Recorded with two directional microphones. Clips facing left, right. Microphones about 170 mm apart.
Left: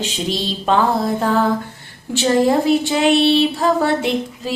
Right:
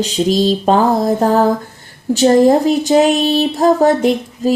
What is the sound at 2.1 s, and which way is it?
Speech, 40° right (ahead or behind).